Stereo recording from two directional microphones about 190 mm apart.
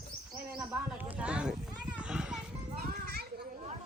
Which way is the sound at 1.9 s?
5° right (ahead or behind).